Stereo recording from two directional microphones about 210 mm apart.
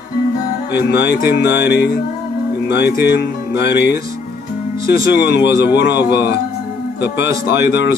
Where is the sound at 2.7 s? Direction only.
55° left (ahead or behind).